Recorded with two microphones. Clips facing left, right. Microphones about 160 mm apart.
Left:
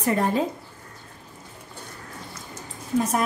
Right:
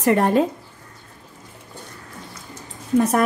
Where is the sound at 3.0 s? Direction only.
65° right (ahead or behind).